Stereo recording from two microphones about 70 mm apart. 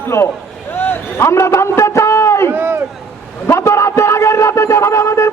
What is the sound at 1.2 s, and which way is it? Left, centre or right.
A man's voice, left.